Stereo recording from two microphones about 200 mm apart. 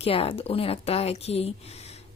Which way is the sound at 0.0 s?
30° left (ahead or behind).